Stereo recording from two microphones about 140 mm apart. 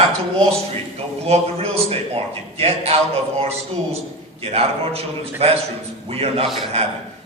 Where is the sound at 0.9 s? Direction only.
45° right (ahead or behind).